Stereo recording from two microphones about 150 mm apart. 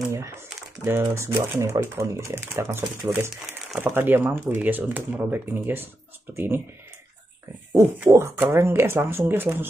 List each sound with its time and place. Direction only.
0.8 s speech: 15° right (ahead or behind)
8.1 s speech: 15° right (ahead or behind)